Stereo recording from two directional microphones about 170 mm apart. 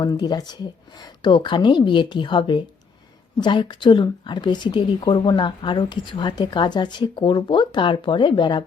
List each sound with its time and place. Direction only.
0.0 s speech: 25° left (ahead or behind)